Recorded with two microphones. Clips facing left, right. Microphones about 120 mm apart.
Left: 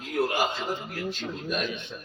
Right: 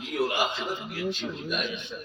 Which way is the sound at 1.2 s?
45° left (ahead or behind).